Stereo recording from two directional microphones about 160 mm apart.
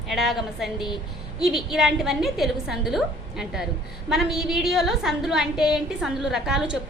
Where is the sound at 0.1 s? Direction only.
Centre (ahead or behind).